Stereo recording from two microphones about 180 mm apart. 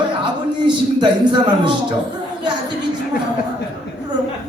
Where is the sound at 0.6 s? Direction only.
25° right (ahead or behind).